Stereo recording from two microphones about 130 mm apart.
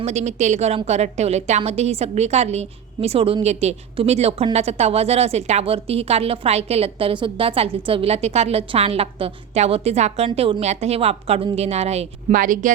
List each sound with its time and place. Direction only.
0.0 s a woman's voice: 60° right (ahead or behind)
12.3 s speech: 90° right